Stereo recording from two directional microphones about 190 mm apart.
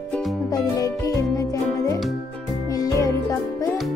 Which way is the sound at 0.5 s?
20° left (ahead or behind).